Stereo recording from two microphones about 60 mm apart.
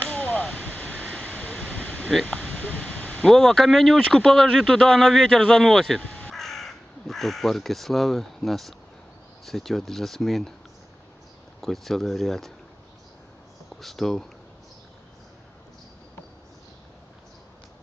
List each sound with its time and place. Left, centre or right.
0.0 s a sound: left
3.3 s a man's voice: centre
11.6 s a man's voice: centre
13.7 s a man's voice: centre